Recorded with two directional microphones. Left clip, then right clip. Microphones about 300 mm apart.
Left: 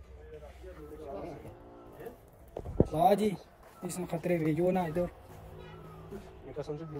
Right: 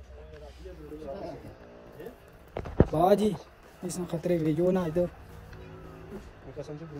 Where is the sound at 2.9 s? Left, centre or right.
Right.